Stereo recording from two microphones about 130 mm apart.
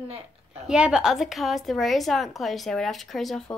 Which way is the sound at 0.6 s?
5° right (ahead or behind).